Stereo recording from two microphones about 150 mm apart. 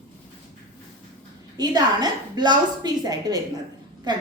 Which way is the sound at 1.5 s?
25° right (ahead or behind).